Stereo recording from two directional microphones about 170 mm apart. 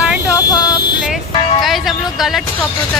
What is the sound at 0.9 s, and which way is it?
Vehicle, 5° right (ahead or behind).